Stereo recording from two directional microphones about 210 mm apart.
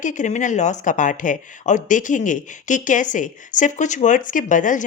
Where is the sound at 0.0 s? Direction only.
35° left (ahead or behind).